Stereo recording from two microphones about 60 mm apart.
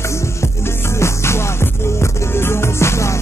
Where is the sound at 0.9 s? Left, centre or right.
Left.